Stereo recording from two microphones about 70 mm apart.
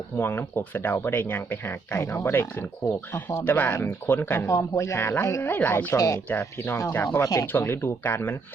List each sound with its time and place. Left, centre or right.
0.2 s speech: left
4.4 s speech: left
5.5 s speech: left
5.9 s speech: left
6.9 s speech: left
7.2 s speech: left
7.4 s speech: left